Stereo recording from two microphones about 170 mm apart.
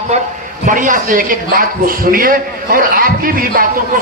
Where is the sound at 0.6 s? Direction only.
50° right (ahead or behind).